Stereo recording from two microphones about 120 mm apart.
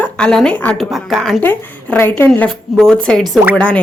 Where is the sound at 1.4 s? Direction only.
15° left (ahead or behind).